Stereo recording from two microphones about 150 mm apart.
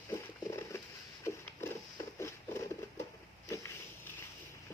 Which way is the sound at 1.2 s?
20° left (ahead or behind).